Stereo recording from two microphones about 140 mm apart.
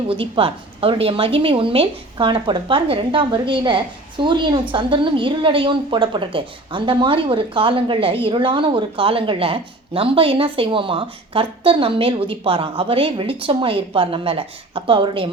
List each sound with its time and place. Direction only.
0.1 s a woman's voice: 40° right (ahead or behind)